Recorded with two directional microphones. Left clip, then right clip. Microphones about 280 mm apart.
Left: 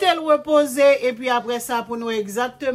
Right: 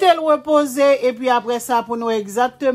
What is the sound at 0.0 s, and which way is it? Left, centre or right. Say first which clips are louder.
A woman's voice: right 3 dB; centre.